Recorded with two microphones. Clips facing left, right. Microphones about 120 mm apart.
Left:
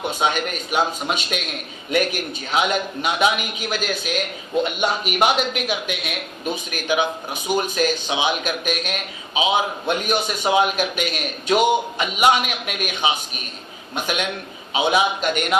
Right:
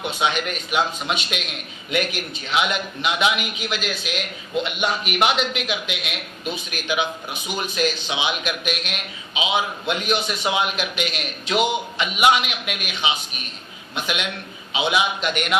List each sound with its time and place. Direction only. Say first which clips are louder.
0.1 s a man's voice: even; 45° left (ahead or behind)
2.5 s a man's voice: left 2 dB; 40° left (ahead or behind)